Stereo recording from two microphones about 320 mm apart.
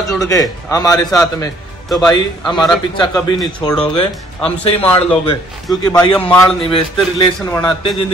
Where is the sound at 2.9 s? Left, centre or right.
Centre.